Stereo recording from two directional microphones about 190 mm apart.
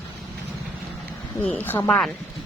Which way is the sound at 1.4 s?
10° left (ahead or behind).